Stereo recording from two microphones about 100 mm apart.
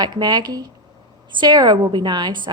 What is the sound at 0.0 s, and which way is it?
A woman's voice, 45° right (ahead or behind).